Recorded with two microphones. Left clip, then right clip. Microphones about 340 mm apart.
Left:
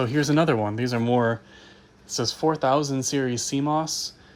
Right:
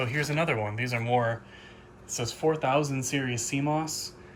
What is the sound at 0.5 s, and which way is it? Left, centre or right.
Speech, left.